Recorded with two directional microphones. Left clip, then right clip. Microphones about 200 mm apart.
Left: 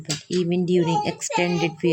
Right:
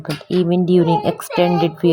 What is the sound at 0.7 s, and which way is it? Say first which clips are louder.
Speech: right 6 dB; 15° right (ahead or behind).